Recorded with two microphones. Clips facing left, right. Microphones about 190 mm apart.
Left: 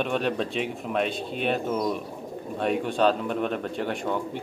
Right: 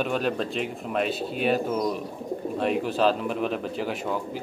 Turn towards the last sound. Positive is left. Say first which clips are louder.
# left 1 dB
turn(degrees=-5)  # may be behind; listen again after turning